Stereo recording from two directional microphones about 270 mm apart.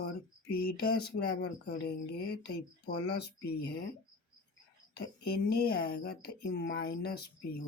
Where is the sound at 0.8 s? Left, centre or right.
Left.